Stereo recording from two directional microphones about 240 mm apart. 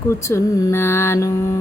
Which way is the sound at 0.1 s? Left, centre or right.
Centre.